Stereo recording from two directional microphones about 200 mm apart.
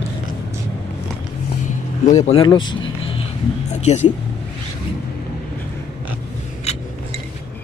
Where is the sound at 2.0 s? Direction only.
35° left (ahead or behind).